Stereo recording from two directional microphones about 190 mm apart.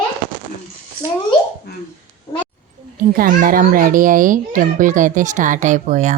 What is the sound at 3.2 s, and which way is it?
A child's voice, 50° right (ahead or behind).